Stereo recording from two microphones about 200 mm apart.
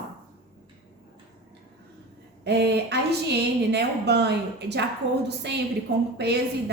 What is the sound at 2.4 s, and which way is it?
A woman's voice, 55° right (ahead or behind).